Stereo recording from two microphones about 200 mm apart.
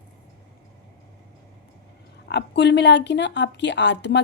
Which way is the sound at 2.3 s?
60° left (ahead or behind).